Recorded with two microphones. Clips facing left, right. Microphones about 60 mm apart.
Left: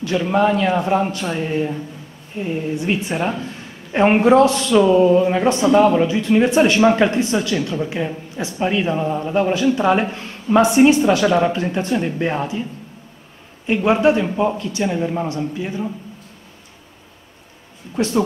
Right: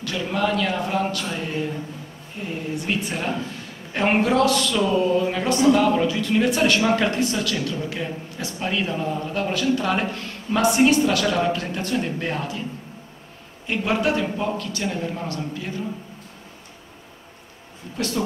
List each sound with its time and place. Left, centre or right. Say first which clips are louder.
0.0 s a man's voice: left 7 dB; left
13.7 s a man's voice: left 7 dB; left
17.9 s a man's voice: left 7 dB; left